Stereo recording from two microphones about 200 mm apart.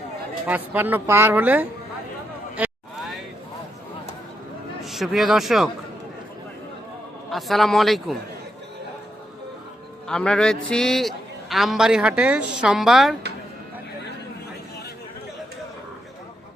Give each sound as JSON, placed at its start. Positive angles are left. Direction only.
{"t": 0.4, "sound": "speech", "side_deg": -10}
{"t": 4.9, "sound": "a man's voice", "side_deg": 0}
{"t": 7.3, "sound": "a man's voice", "side_deg": 0}
{"t": 10.1, "sound": "a man's voice", "side_deg": 5}